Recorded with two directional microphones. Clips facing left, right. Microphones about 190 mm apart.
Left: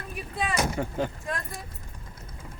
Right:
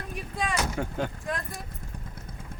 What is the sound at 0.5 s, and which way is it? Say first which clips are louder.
Speech: left 4 dB; 5° left (ahead or behind).